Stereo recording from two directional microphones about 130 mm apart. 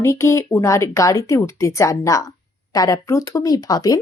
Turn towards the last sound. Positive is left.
turn(degrees=30)  # may be behind; listen again after turning